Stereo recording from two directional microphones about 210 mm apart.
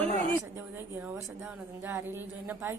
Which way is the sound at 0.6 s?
10° right (ahead or behind).